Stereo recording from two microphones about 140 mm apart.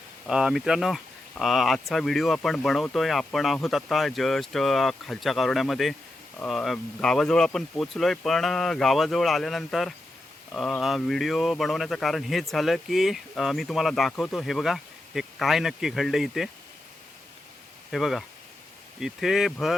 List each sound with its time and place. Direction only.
0.3 s speech: 5° right (ahead or behind)
17.9 s speech: centre (ahead or behind)